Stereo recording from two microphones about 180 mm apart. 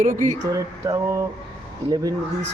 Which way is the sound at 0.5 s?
15° right (ahead or behind).